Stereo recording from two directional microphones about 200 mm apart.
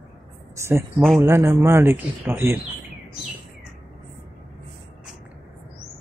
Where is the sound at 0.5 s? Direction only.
15° right (ahead or behind).